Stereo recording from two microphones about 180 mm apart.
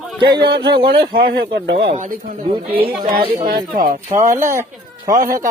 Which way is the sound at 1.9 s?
45° right (ahead or behind).